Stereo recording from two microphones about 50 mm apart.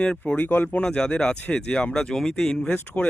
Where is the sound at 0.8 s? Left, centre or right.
Centre.